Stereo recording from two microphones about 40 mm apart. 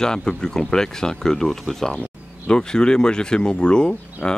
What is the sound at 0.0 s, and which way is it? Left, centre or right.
Speech, centre.